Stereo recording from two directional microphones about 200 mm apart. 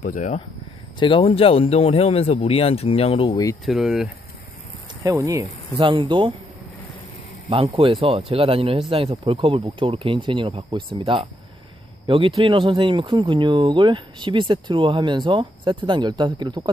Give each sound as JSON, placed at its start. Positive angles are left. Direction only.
{"t": 0.1, "sound": "speech", "side_deg": 40}
{"t": 0.9, "sound": "speech", "side_deg": 25}
{"t": 3.6, "sound": "speech", "side_deg": 0}
{"t": 5.0, "sound": "speech", "side_deg": -15}
{"t": 7.4, "sound": "speech", "side_deg": -30}